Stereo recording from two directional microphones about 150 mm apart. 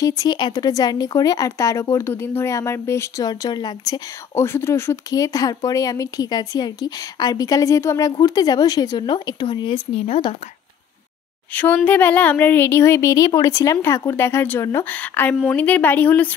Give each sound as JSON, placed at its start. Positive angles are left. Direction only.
{"t": 0.0, "sound": "a woman's voice", "side_deg": 25}
{"t": 11.5, "sound": "speech", "side_deg": 10}